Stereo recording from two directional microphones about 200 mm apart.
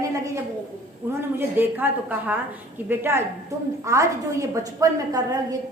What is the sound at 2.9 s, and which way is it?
A woman's voice, 10° right (ahead or behind).